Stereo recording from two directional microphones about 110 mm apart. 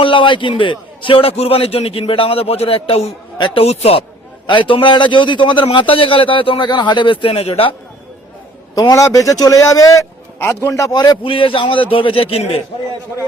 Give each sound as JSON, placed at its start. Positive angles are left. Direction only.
{"t": 0.0, "sound": "a man's voice", "side_deg": 50}
{"t": 3.3, "sound": "a man's voice", "side_deg": 45}
{"t": 3.6, "sound": "a man's voice", "side_deg": 65}
{"t": 4.4, "sound": "a man's voice", "side_deg": 50}
{"t": 8.7, "sound": "a man's voice", "side_deg": 35}
{"t": 11.2, "sound": "a man's voice", "side_deg": 55}